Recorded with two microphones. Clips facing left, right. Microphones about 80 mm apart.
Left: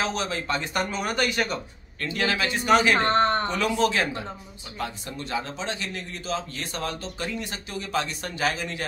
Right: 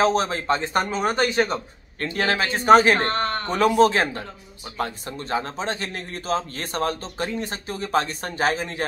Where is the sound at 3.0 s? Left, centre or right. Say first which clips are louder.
Left 3 dB; left.